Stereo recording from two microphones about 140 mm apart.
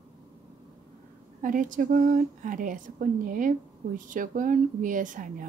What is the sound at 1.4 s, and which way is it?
Speech, 75° right (ahead or behind).